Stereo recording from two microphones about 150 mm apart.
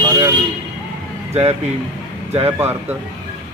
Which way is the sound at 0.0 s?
25° right (ahead or behind).